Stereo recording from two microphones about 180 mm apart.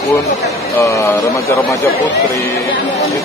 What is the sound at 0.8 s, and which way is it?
Speech, 15° left (ahead or behind).